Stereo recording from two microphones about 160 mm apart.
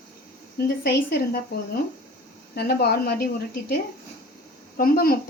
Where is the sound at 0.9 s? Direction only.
90° left.